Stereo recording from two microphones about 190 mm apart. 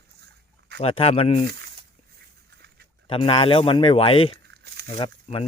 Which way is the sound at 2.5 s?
60° right (ahead or behind).